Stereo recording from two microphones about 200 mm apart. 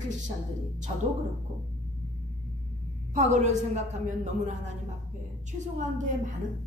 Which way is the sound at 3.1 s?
35° right (ahead or behind).